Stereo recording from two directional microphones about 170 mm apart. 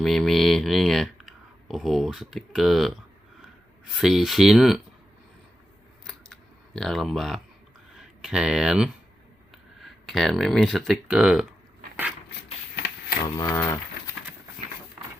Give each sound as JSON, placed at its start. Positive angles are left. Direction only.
{"t": 0.0, "sound": "speech", "side_deg": 0}
{"t": 4.0, "sound": "speech", "side_deg": 0}
{"t": 6.7, "sound": "speech", "side_deg": 0}
{"t": 12.7, "sound": "printer", "side_deg": 75}
{"t": 13.3, "sound": "speech", "side_deg": 20}